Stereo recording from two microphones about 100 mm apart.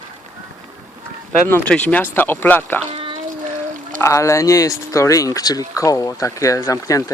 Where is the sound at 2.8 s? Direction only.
65° right (ahead or behind).